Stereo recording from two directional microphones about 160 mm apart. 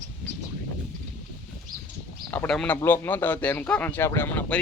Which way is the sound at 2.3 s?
10° left (ahead or behind).